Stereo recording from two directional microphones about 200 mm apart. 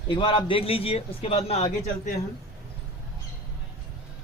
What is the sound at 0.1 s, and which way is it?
A man's voice, 25° left (ahead or behind).